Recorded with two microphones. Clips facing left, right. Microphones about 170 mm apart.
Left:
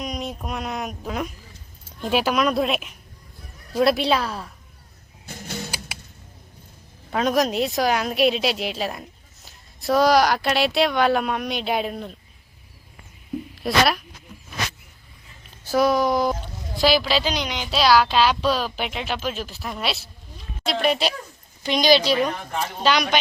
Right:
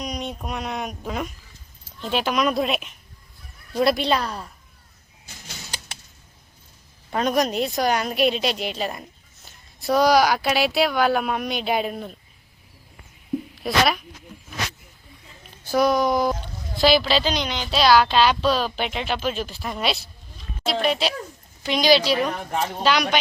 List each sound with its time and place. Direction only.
0.0 s a woman's voice: centre (ahead or behind)
5.2 s music: 55° left (ahead or behind)
7.1 s a woman's voice: centre (ahead or behind)
13.6 s a woman's voice: centre (ahead or behind)
15.6 s a woman's voice: 5° left (ahead or behind)